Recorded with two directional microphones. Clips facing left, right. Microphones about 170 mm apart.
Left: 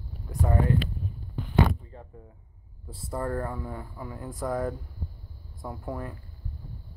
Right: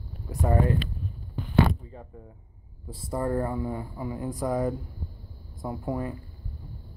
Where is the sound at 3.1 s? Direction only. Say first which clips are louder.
Right 3 dB; 15° right (ahead or behind).